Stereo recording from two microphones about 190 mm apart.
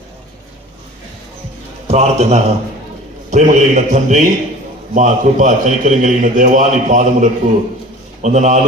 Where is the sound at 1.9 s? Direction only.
35° right (ahead or behind).